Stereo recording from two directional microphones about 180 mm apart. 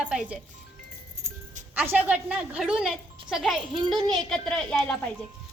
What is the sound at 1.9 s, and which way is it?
Speech, 10° right (ahead or behind).